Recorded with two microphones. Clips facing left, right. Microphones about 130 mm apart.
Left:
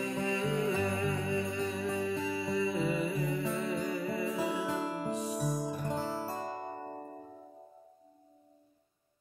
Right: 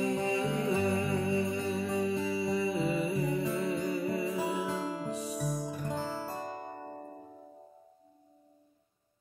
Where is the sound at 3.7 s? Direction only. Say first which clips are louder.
Right 2 dB; 25° right (ahead or behind).